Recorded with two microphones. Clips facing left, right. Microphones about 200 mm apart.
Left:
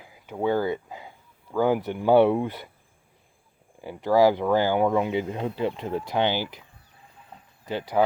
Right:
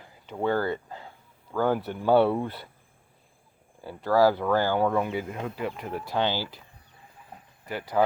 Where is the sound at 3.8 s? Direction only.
15° left (ahead or behind).